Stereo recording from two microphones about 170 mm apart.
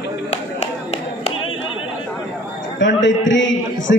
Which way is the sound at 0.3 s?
40° left (ahead or behind).